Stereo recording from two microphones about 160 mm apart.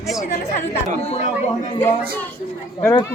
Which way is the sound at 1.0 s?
40° left (ahead or behind).